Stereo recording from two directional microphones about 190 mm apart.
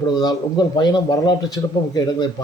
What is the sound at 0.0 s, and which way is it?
A man's voice, 20° left (ahead or behind).